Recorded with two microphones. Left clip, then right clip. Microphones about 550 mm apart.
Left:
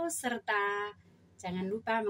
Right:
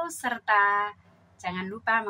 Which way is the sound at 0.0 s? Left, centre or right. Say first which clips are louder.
Right 4 dB; left.